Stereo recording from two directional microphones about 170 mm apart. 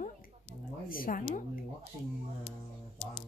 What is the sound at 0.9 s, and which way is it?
Speech, 55° left (ahead or behind).